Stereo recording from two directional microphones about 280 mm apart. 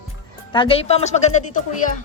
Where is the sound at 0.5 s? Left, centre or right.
Centre.